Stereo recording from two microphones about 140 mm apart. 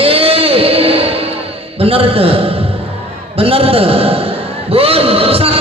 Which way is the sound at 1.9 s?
45° right (ahead or behind).